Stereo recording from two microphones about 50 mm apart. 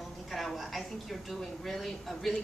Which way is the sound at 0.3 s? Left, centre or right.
Centre.